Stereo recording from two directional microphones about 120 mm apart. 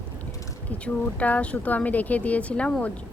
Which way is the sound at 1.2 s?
10° left (ahead or behind).